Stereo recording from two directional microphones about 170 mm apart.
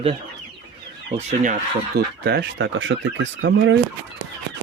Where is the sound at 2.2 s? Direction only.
80° right.